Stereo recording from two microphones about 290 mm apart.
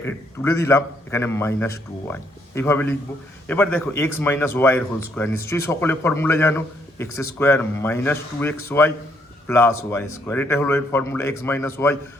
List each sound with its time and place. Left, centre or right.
0.0 s speech: centre